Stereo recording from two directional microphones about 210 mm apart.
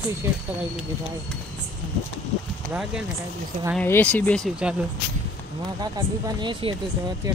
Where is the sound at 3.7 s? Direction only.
10° left (ahead or behind).